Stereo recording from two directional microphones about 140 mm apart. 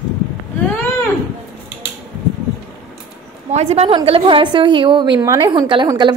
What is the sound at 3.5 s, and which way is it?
A woman's voice, 50° right (ahead or behind).